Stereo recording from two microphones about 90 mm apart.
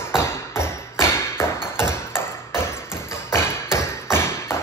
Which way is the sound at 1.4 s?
30° left (ahead or behind).